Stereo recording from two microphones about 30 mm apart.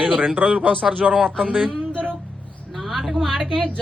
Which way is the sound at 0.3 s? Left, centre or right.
Right.